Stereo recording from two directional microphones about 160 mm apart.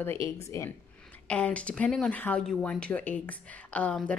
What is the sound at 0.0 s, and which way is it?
Speech, 15° left (ahead or behind).